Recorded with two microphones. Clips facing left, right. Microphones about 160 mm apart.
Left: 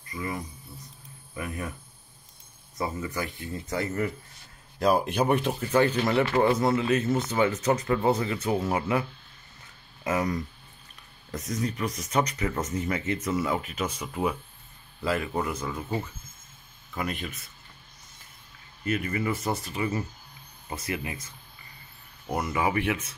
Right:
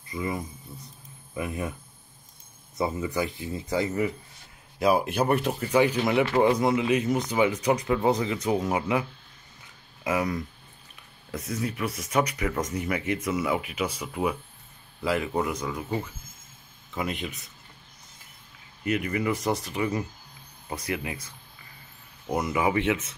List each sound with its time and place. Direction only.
0.1 s speech: 20° right (ahead or behind)
2.9 s speech: 20° right (ahead or behind)
10.0 s speech: 10° right (ahead or behind)
16.9 s speech: 20° right (ahead or behind)
18.9 s speech: 15° right (ahead or behind)
22.3 s speech: 20° right (ahead or behind)